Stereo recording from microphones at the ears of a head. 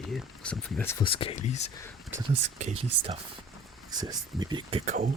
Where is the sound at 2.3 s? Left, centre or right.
Right.